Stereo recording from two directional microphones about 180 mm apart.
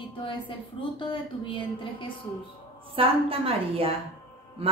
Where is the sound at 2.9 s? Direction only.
30° right (ahead or behind).